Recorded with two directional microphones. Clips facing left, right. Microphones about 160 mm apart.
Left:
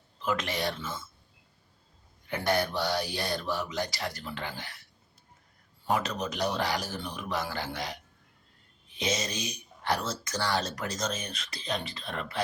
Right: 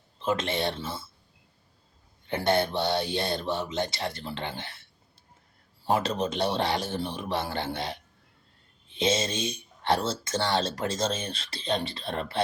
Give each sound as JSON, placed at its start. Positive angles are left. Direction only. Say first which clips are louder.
{"t": 0.2, "sound": "speech", "louder": "right 3 dB", "side_deg": -25}
{"t": 2.2, "sound": "speech", "louder": "right 3 dB", "side_deg": -25}